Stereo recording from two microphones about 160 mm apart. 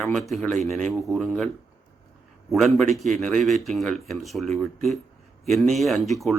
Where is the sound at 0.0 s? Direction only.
Centre (ahead or behind).